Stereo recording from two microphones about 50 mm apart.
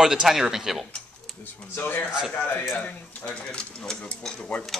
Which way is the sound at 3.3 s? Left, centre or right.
Centre.